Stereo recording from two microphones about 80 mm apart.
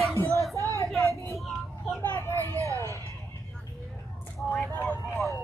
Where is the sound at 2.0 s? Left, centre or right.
Left.